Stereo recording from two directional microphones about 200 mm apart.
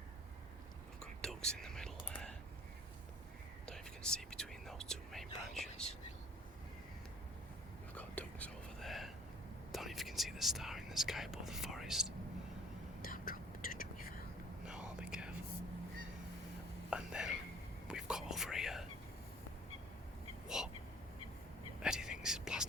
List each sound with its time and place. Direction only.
1.2 s whispering: 5° left (ahead or behind)
3.7 s whispering: 5° left (ahead or behind)
5.8 s speech: 5° left (ahead or behind)
7.9 s whispering: 10° left (ahead or behind)
13.0 s whispering: 45° left (ahead or behind)
14.6 s whispering: 5° right (ahead or behind)
16.9 s whispering: 5° right (ahead or behind)
20.6 s a sound: centre (ahead or behind)
21.8 s whispering: 5° right (ahead or behind)